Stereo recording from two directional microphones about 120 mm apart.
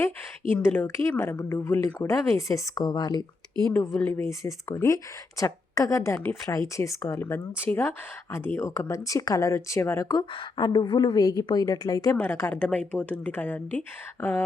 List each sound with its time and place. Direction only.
0.5 s speech: 15° left (ahead or behind); by 3.2 s 35° left (ahead or behind)
3.7 s a woman's voice: 10° left (ahead or behind)
4.2 s speech: 25° left (ahead or behind)
10.6 s a woman's voice: 40° left (ahead or behind)
12.1 s a woman's voice: 20° left (ahead or behind)